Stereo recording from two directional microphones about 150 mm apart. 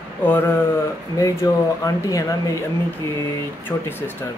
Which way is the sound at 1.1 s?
25° left (ahead or behind).